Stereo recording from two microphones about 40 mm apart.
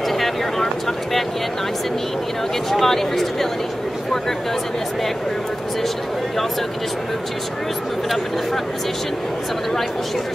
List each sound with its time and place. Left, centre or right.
2.7 s speech: centre